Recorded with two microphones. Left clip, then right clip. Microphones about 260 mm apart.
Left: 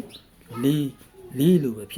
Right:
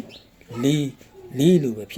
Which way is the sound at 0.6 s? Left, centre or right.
Centre.